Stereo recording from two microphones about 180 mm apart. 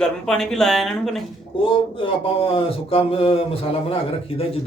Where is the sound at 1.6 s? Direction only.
30° left (ahead or behind).